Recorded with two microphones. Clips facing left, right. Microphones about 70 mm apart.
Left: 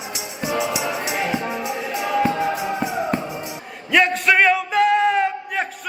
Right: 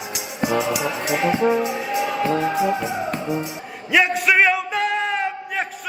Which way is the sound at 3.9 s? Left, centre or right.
Centre.